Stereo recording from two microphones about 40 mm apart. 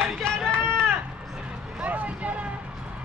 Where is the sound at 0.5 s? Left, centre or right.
Right.